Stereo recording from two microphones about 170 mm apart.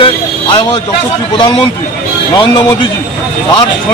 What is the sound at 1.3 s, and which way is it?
A man's voice, 30° left (ahead or behind).